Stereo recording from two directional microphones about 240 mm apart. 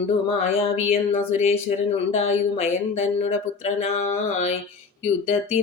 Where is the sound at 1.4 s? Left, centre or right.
Left.